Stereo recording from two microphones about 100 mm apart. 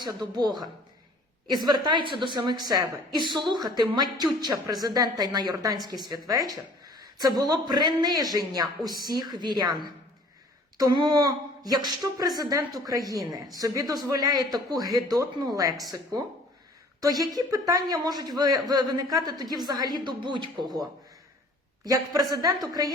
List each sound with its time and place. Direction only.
0.0 s a woman's voice: 45° right (ahead or behind)
10.8 s a woman's voice: 45° right (ahead or behind)
17.0 s a woman's voice: 40° right (ahead or behind)
21.8 s a woman's voice: 35° right (ahead or behind)